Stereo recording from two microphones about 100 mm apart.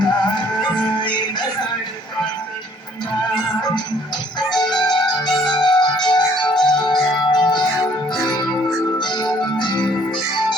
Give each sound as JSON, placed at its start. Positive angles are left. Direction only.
{"t": 0.0, "sound": "music", "side_deg": 45}
{"t": 4.8, "sound": "music", "side_deg": 45}
{"t": 9.0, "sound": "music", "side_deg": 45}